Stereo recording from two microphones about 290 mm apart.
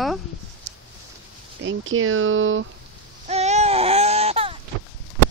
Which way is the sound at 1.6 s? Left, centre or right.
Right.